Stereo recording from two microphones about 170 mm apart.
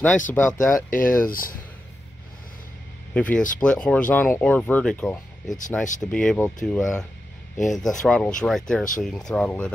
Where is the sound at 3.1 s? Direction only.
5° left (ahead or behind).